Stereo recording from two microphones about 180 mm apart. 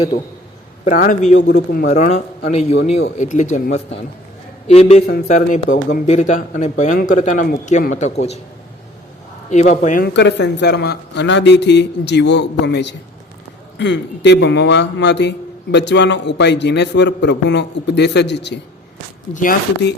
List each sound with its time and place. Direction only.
0.9 s a man's voice: 45° left (ahead or behind)
9.5 s speech: 40° left (ahead or behind)
10.2 s a man's voice: 75° left (ahead or behind)
19.3 s speech: 45° left (ahead or behind)